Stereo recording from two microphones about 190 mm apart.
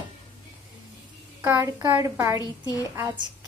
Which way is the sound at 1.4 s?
10° right (ahead or behind).